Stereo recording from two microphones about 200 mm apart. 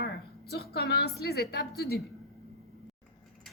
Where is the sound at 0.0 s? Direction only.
50° left (ahead or behind).